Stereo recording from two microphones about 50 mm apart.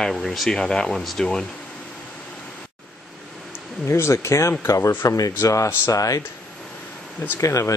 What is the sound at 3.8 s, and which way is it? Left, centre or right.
Speech, left.